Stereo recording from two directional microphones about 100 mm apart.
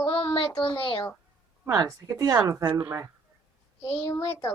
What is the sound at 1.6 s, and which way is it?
A woman's voice, 35° right (ahead or behind).